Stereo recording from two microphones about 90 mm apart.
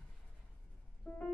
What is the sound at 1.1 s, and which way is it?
Music, 15° left (ahead or behind).